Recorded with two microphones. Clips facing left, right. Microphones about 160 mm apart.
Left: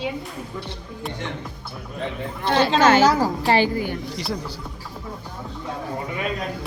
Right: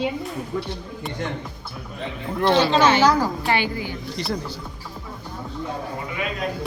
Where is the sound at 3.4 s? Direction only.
35° left (ahead or behind).